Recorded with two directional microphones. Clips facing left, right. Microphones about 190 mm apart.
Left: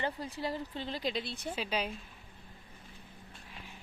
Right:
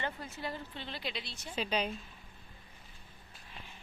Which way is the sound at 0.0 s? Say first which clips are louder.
Left 4 dB; 35° left (ahead or behind).